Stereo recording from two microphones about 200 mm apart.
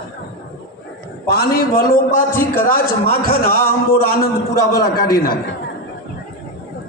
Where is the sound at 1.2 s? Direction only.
50° left (ahead or behind).